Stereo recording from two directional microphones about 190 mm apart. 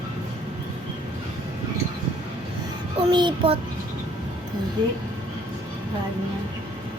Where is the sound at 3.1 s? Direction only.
25° right (ahead or behind).